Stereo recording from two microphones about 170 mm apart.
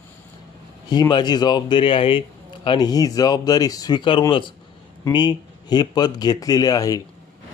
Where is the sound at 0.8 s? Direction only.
25° left (ahead or behind).